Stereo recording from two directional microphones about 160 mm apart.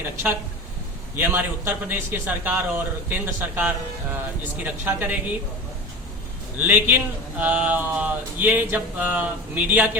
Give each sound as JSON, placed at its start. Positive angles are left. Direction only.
{"t": 1.1, "sound": "speech", "side_deg": -15}
{"t": 6.6, "sound": "speech", "side_deg": -10}